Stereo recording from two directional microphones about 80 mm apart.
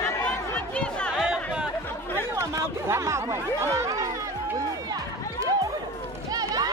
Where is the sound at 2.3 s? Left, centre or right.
Right.